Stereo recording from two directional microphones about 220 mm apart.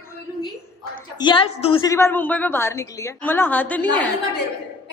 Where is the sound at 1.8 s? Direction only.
10° left (ahead or behind).